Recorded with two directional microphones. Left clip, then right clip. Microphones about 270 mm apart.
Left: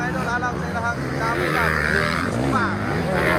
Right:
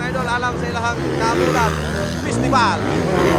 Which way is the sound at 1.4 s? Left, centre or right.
Right.